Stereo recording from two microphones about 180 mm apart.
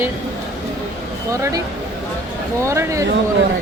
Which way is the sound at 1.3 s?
20° right (ahead or behind).